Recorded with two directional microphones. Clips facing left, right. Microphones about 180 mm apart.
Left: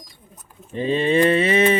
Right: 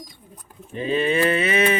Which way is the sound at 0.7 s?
30° left (ahead or behind).